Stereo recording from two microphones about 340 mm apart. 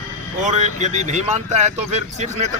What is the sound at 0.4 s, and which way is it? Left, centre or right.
Speech, right.